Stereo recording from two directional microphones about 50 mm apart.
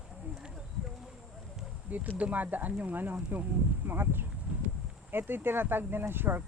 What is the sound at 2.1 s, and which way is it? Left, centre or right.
Speech, right.